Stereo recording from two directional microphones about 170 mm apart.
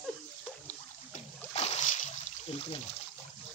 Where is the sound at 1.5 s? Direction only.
40° left (ahead or behind).